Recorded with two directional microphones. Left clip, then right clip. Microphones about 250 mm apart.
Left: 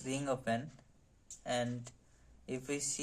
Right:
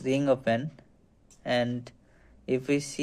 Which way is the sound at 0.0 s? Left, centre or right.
Right.